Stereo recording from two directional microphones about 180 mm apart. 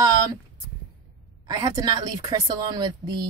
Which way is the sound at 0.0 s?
25° right (ahead or behind).